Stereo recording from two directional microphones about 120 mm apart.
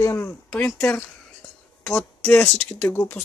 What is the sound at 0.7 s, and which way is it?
Speech, 5° left (ahead or behind).